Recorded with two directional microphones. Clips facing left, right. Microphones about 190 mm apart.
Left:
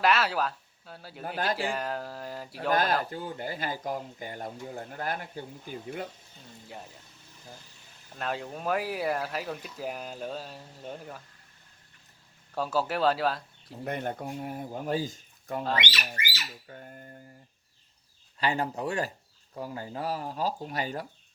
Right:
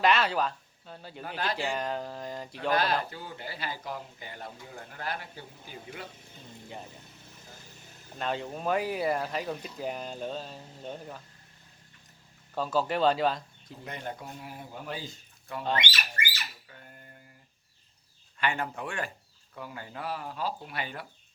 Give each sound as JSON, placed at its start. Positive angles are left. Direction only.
{"t": 0.0, "sound": "speech", "side_deg": 5}
{"t": 2.6, "sound": "speech", "side_deg": 45}
{"t": 8.1, "sound": "speech", "side_deg": 5}
{"t": 12.5, "sound": "speech", "side_deg": 10}
{"t": 13.8, "sound": "speech", "side_deg": 55}
{"t": 16.2, "sound": "squawk", "side_deg": -55}
{"t": 16.6, "sound": "a sound", "side_deg": 40}
{"t": 18.3, "sound": "speech", "side_deg": 35}